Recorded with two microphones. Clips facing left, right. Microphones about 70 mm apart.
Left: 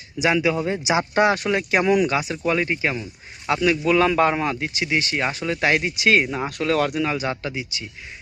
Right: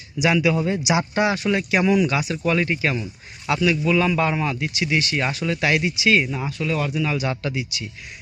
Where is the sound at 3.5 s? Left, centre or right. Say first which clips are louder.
Left 1 dB; left.